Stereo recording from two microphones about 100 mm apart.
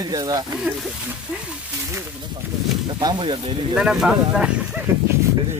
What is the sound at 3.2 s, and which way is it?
Speech, 60° right (ahead or behind).